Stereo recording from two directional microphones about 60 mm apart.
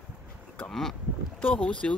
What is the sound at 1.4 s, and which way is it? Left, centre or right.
Speech, centre.